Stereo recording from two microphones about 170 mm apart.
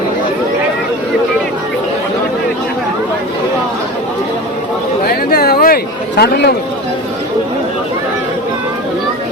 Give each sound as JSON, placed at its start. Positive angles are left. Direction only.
{"t": 5.0, "sound": "chatter", "side_deg": 65}